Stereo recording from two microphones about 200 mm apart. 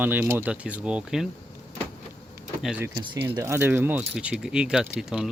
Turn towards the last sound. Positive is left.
turn(degrees=-5)  # may be behind; listen again after turning